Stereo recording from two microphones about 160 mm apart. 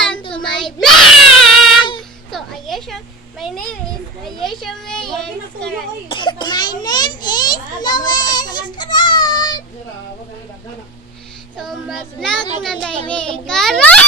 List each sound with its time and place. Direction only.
0.2 s child singing: 30° left (ahead or behind)
0.6 s child singing: centre (ahead or behind)
2.0 s a sound: centre (ahead or behind)
6.1 s cough: 30° left (ahead or behind)
11.5 s child singing: centre (ahead or behind)
13.1 s a child's voice: 5° left (ahead or behind)